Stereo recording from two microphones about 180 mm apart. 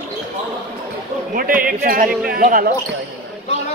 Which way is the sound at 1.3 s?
50° right (ahead or behind).